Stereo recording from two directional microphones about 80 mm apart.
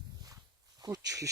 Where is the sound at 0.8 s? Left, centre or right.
Right.